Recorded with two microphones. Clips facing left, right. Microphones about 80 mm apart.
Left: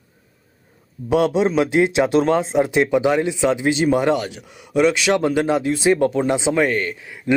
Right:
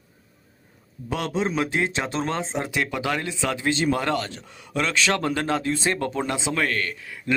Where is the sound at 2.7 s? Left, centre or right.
Left.